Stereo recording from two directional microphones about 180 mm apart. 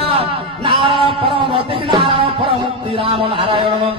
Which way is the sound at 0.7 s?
30° right (ahead or behind).